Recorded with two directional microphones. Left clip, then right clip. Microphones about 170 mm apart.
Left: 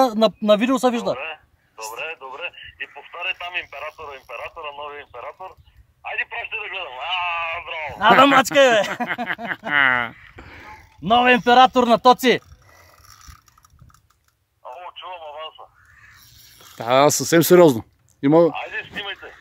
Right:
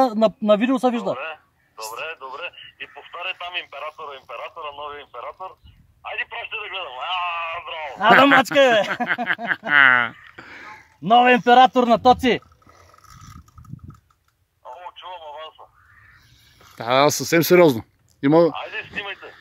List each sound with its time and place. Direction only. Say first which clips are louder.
0.0 s speech: left 1 dB; 15° left (ahead or behind)
1.1 s a sound: even; 30° left (ahead or behind)
6.0 s radio: left 2 dB; 30° left (ahead or behind)
8.0 s speech: even; 5° left (ahead or behind)
12.0 s speech: left 1 dB; 35° left (ahead or behind)
14.6 s a sound: left 2 dB; 15° left (ahead or behind)
16.7 s speech: left 2 dB; 15° left (ahead or behind)
18.2 s speech: left 1 dB; 10° left (ahead or behind)
18.5 s speech: left 1 dB; 35° left (ahead or behind)